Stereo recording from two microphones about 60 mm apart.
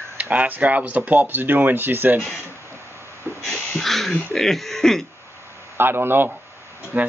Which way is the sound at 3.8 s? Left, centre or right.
Centre.